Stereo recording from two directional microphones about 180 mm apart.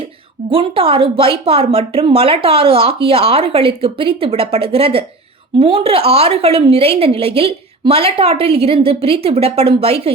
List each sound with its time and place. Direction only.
0.5 s a woman's voice: 30° right (ahead or behind)